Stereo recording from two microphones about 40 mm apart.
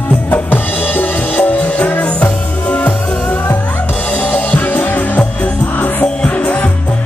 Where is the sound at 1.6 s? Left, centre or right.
Left.